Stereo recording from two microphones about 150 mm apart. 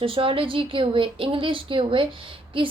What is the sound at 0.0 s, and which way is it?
A woman's voice, 35° right (ahead or behind).